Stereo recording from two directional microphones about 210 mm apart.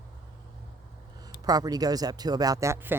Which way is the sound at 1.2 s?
20° right (ahead or behind).